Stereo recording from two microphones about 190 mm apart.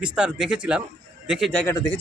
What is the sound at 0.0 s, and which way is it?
A man's voice, 5° right (ahead or behind).